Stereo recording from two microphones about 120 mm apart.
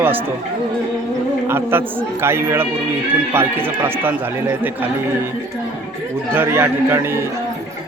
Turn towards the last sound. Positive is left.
turn(degrees=-20)  # may be behind; listen again after turning